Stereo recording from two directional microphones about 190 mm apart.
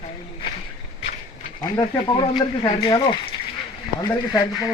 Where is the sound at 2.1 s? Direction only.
25° left (ahead or behind).